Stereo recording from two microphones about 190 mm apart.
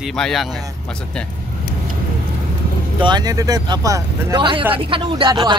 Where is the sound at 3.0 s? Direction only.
20° right (ahead or behind).